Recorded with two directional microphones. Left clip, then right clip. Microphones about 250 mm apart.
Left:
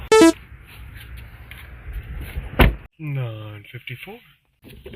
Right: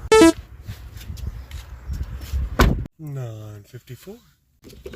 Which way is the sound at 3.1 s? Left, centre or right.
Centre.